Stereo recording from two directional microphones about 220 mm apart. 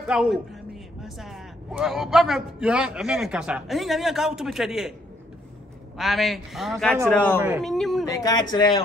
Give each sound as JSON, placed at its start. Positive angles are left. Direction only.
{"t": 0.0, "sound": "a man's voice", "side_deg": -5}
{"t": 5.9, "sound": "a man's voice", "side_deg": 0}
{"t": 8.1, "sound": "speech", "side_deg": 15}